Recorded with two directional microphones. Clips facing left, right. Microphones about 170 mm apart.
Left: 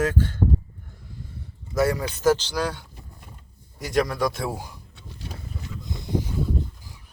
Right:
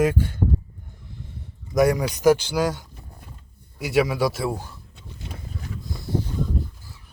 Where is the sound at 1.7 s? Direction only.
15° right (ahead or behind).